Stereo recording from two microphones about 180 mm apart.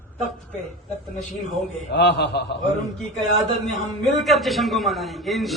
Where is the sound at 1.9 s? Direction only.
65° left (ahead or behind).